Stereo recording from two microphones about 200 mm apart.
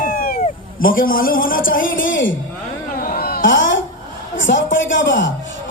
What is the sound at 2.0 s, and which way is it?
Music, 70° left (ahead or behind).